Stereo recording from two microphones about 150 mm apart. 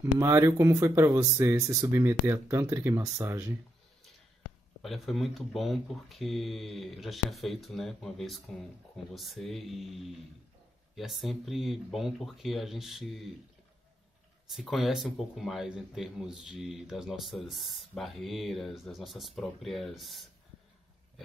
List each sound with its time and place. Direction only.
0.0 s speech: 20° right (ahead or behind)
4.8 s speech: centre (ahead or behind)
14.5 s speech: centre (ahead or behind)